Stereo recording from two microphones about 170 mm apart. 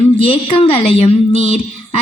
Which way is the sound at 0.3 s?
35° left (ahead or behind).